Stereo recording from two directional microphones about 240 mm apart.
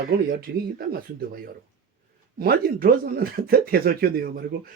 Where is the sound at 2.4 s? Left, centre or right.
Right.